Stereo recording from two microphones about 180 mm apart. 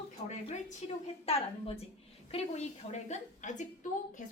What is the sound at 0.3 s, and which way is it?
A woman's voice, 40° left (ahead or behind).